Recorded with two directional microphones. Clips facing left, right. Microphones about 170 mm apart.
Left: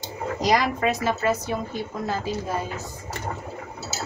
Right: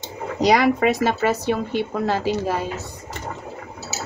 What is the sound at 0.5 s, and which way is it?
Speech, 70° right (ahead or behind).